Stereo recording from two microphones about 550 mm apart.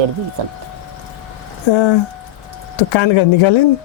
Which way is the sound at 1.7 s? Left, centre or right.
Left.